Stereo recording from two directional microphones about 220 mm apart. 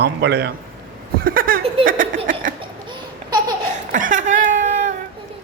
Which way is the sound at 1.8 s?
40° right (ahead or behind).